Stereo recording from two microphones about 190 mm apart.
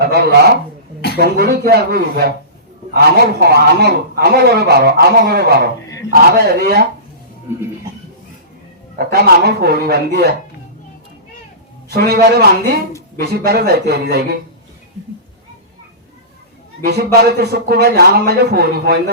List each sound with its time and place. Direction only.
0.0 s a man's voice: 55° right (ahead or behind)
9.0 s a man's voice: 55° right (ahead or behind)
11.9 s a man's voice: 55° right (ahead or behind)
16.8 s a man's voice: 60° right (ahead or behind)